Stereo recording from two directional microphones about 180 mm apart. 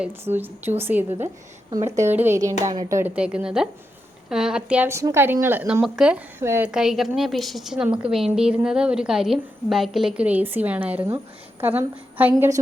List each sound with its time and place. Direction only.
0.0 s a woman's voice: 10° right (ahead or behind)